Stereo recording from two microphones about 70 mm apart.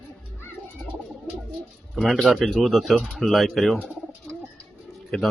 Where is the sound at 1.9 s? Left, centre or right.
Centre.